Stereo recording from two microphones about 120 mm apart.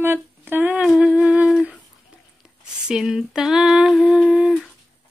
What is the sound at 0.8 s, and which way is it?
Humming, 5° right (ahead or behind).